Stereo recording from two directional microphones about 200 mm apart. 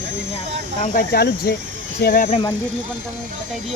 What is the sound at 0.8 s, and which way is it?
Speech, 45° left (ahead or behind).